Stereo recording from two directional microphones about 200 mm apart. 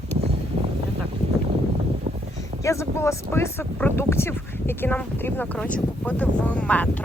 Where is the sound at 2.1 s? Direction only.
30° right (ahead or behind).